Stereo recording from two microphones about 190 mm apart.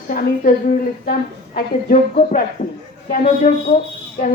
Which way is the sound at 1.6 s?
45° left (ahead or behind).